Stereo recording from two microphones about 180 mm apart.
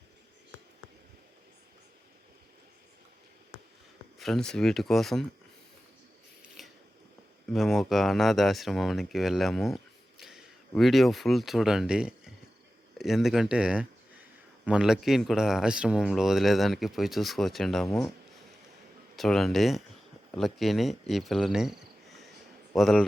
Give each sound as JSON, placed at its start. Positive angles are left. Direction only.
{"t": 4.2, "sound": "speech", "side_deg": 5}
{"t": 6.6, "sound": "biting", "side_deg": 0}
{"t": 7.5, "sound": "speech", "side_deg": 0}
{"t": 19.1, "sound": "speech", "side_deg": 0}